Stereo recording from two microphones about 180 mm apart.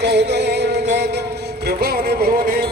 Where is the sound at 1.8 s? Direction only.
60° right (ahead or behind).